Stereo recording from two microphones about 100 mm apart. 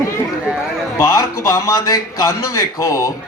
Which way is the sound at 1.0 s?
30° left (ahead or behind).